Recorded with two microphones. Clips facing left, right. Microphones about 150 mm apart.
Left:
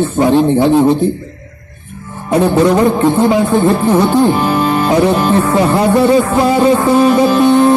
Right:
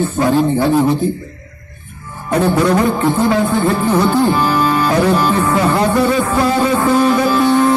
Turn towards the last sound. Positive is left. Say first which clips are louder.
# left 4 dB
turn(degrees=20)  # may be behind; listen again after turning